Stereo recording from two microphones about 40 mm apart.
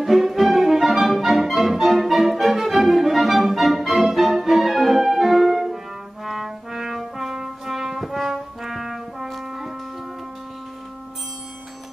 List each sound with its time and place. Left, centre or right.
0.0 s music: centre
6.2 s brass instrument: centre